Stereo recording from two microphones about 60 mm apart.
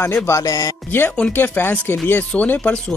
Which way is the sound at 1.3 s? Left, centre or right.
Left.